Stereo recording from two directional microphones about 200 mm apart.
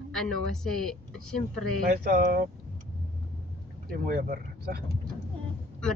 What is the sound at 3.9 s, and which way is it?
Speech, 45° right (ahead or behind).